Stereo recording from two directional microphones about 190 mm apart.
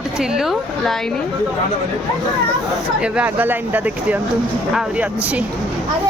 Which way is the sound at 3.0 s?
5° right (ahead or behind).